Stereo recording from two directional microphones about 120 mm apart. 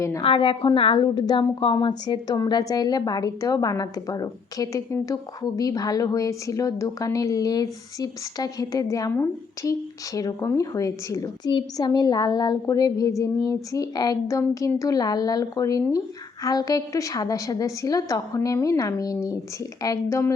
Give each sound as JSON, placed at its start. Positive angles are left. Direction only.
{"t": 0.2, "sound": "a woman's voice", "side_deg": 45}